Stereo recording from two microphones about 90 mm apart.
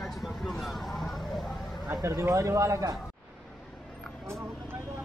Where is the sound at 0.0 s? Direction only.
Centre (ahead or behind).